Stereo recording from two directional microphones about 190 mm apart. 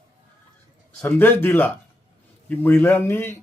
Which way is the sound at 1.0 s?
10° left (ahead or behind).